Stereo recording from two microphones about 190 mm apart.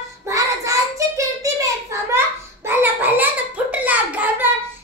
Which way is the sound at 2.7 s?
10° right (ahead or behind).